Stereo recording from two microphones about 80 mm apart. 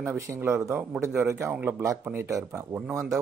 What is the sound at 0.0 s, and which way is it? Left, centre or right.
Speech, right.